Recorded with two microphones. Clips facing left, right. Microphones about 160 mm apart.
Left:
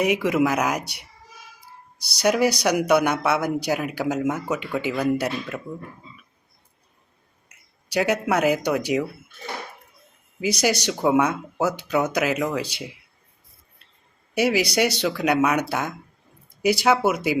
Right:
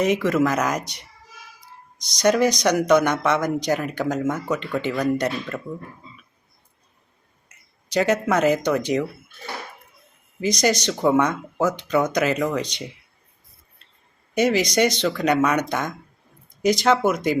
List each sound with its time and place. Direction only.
0.0 s speech: 10° left (ahead or behind)
7.4 s speech: 10° left (ahead or behind)
10.4 s speech: 10° left (ahead or behind)
14.3 s speech: 10° left (ahead or behind)